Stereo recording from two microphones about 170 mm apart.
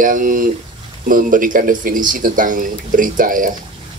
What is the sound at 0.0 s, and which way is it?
Speech, 50° right (ahead or behind).